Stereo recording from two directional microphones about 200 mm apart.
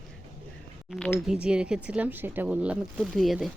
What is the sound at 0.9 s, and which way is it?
Speech, 5° left (ahead or behind).